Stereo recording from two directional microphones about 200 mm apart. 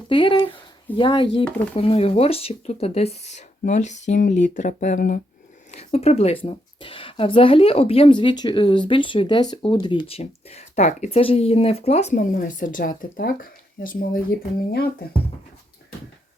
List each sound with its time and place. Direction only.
0.1 s a woman's voice: 25° left (ahead or behind); by 5.2 s 40° left (ahead or behind)
5.7 s a woman's voice: 30° left (ahead or behind); by 15.0 s 50° left (ahead or behind)